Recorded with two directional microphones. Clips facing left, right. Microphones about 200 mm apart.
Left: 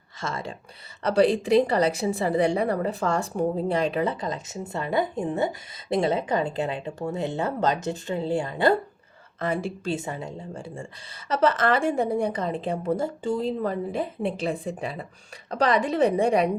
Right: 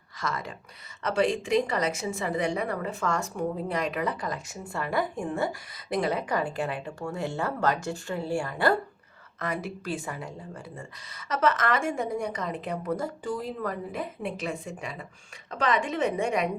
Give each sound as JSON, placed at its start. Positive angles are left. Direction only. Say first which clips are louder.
{"t": 0.2, "sound": "a woman's voice", "louder": "left 1 dB", "side_deg": 25}